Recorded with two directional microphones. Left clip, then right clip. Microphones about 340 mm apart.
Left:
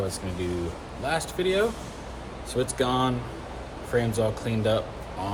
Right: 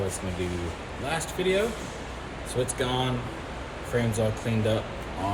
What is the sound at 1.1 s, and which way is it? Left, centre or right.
Speech, centre.